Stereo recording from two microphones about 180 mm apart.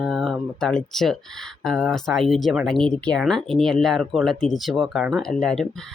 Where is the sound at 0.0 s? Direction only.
Centre (ahead or behind).